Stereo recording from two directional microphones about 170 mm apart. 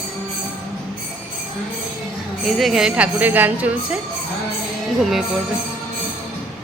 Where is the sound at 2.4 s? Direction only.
Centre (ahead or behind).